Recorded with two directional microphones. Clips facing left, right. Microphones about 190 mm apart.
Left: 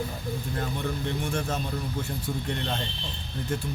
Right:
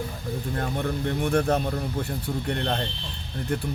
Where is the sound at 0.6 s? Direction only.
55° right (ahead or behind).